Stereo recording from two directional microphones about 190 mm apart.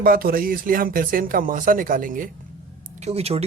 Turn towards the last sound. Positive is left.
turn(degrees=-35)  # may be behind; listen again after turning